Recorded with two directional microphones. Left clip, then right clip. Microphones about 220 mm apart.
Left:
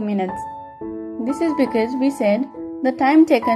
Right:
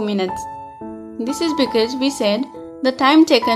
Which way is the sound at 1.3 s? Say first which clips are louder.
Right 1 dB; 5° right (ahead or behind).